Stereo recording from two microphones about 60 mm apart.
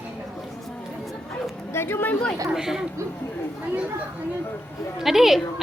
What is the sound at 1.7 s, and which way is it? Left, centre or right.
Speech, left.